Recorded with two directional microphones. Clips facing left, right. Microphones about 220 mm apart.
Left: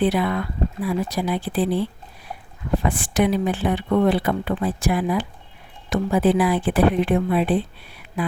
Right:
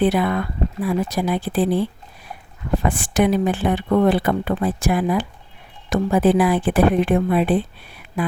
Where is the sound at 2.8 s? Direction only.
50° right (ahead or behind).